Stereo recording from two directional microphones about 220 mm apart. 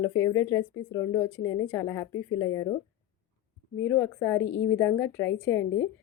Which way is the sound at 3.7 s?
10° left (ahead or behind).